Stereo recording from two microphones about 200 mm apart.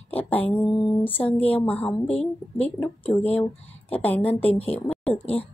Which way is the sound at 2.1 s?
30° left (ahead or behind).